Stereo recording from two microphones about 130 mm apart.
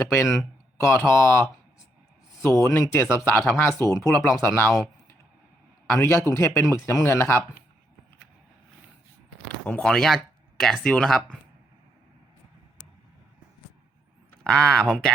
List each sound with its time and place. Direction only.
0.8 s a man's voice: 20° left (ahead or behind)
4.1 s a man's voice: 15° left (ahead or behind)
9.6 s speech: 5° left (ahead or behind)
14.4 s speech: 5° left (ahead or behind)